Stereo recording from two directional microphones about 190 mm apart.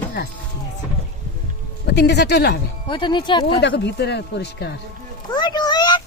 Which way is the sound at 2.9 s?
25° left (ahead or behind).